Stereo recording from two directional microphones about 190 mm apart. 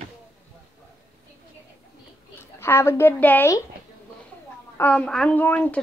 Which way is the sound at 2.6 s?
15° left (ahead or behind).